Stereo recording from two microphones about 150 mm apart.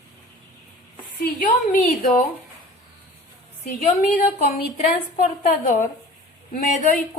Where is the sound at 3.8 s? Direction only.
60° left (ahead or behind).